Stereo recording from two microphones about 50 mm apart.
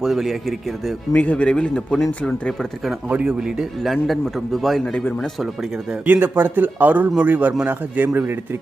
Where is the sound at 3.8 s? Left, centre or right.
Centre.